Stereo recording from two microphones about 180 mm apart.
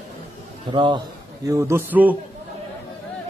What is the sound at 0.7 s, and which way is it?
A man's voice, 25° right (ahead or behind).